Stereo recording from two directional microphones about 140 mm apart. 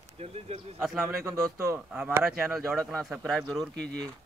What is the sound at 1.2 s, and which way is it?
Speech, 25° right (ahead or behind).